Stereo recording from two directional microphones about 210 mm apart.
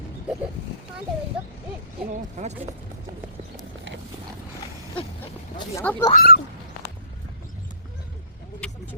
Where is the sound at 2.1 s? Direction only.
35° right (ahead or behind).